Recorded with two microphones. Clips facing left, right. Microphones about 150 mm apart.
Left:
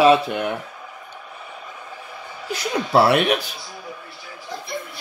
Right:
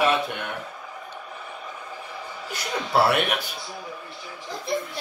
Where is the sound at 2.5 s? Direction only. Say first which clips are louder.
Left 6 dB; 90° left.